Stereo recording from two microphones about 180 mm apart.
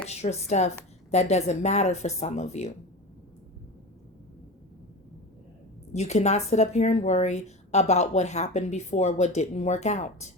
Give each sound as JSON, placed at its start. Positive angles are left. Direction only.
{"t": 0.1, "sound": "a woman's voice", "side_deg": 35}
{"t": 5.9, "sound": "a woman's voice", "side_deg": 40}